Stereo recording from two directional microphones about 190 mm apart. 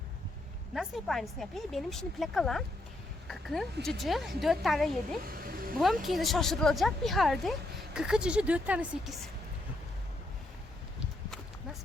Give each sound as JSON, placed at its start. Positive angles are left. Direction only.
{"t": 0.7, "sound": "speech", "side_deg": 0}
{"t": 5.3, "sound": "a sound", "side_deg": -50}
{"t": 5.8, "sound": "speech", "side_deg": 0}